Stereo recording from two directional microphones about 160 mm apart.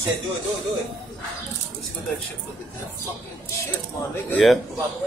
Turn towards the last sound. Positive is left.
turn(degrees=0)  # may be behind; listen again after turning